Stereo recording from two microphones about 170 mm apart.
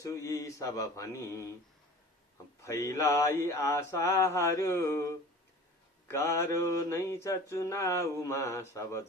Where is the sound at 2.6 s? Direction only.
15° left (ahead or behind).